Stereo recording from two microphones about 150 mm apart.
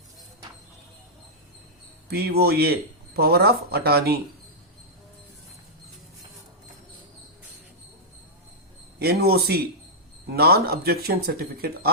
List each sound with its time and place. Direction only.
2.0 s speech: 90° right
9.0 s speech: 90° right